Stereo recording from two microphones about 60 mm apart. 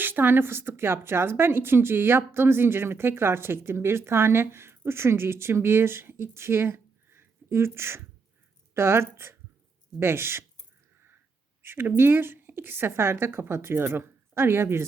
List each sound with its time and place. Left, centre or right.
0.0 s a woman's voice: right
11.6 s a woman's voice: right